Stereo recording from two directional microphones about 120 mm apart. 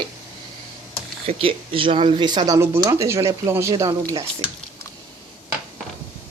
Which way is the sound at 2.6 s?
25° right (ahead or behind).